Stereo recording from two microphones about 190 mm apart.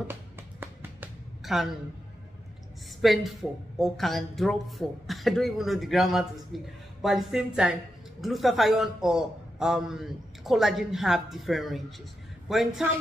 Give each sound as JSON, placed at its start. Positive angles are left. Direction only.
{"t": 0.1, "sound": "music", "side_deg": -10}
{"t": 3.0, "sound": "a woman's voice", "side_deg": 0}